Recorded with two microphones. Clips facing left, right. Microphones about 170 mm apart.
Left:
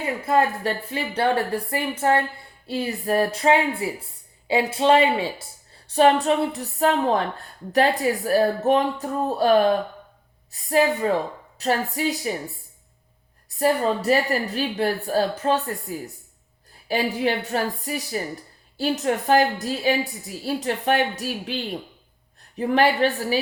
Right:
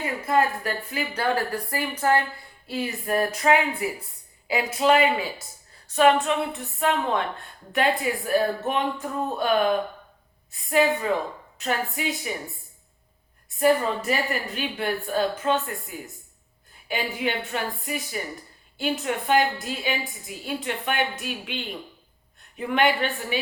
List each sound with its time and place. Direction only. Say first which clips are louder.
0.3 s speech: left 2 dB; 30° left (ahead or behind)
13.6 s speech: even; 35° left (ahead or behind)